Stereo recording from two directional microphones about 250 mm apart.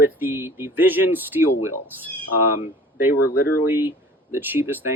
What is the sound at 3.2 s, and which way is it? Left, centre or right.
Speech, left.